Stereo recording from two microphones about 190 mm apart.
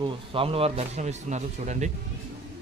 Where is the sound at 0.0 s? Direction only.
30° right (ahead or behind).